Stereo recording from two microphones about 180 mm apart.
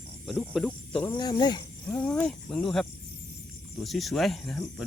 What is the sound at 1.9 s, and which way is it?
Speech, 10° left (ahead or behind).